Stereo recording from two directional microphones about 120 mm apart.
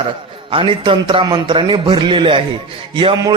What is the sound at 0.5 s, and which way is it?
A man's voice, 45° right (ahead or behind).